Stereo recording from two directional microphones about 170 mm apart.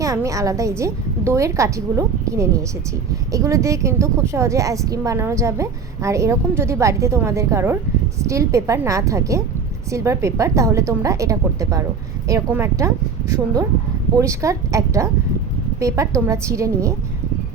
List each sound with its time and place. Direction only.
0.0 s a woman's voice: 20° right (ahead or behind)
14.2 s a woman's voice: 20° right (ahead or behind)